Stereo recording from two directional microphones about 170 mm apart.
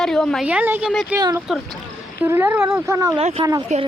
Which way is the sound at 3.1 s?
35° right (ahead or behind).